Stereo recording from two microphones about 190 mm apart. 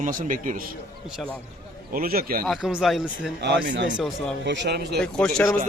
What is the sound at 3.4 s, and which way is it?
Speech, 65° right (ahead or behind).